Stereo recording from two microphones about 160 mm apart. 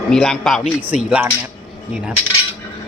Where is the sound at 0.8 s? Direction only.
10° right (ahead or behind).